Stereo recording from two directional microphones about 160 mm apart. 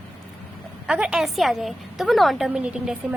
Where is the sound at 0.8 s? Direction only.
5° right (ahead or behind).